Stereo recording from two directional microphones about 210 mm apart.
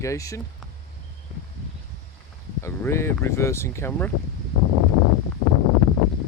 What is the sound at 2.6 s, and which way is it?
Speech, 10° left (ahead or behind).